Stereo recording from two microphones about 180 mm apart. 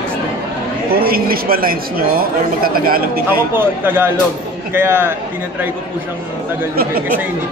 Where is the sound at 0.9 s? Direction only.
55° right (ahead or behind).